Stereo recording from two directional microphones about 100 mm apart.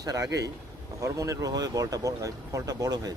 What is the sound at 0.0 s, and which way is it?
Speech, 40° right (ahead or behind).